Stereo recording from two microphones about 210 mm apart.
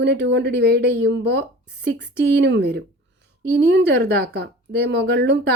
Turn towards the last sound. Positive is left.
turn(degrees=-50)  # may be behind; listen again after turning